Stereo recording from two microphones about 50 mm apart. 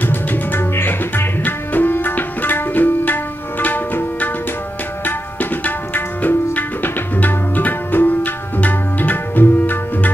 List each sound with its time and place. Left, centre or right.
0.0 s music: left
5.0 s tabla: left